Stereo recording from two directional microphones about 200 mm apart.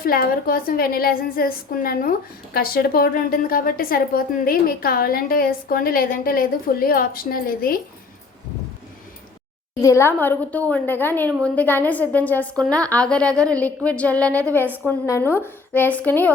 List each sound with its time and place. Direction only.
0.0 s a woman's voice: 45° left (ahead or behind)
9.8 s a woman's voice: 15° left (ahead or behind)